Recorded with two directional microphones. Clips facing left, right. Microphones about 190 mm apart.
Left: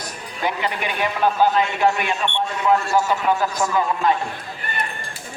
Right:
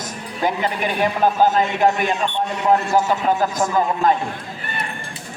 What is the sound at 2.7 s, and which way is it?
Speech, 20° right (ahead or behind).